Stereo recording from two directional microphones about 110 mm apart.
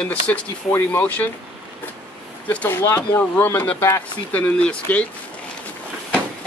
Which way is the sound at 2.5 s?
15° left (ahead or behind).